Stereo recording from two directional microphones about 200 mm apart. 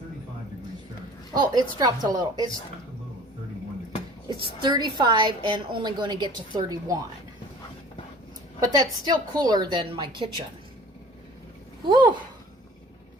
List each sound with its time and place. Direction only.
1.3 s a woman's voice: 20° right (ahead or behind)
4.6 s a woman's voice: 20° right (ahead or behind)
8.6 s a woman's voice: 20° right (ahead or behind)
11.9 s a woman's voice: 25° right (ahead or behind)